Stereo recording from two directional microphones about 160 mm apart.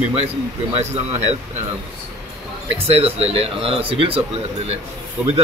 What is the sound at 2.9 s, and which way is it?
Speech, 40° right (ahead or behind).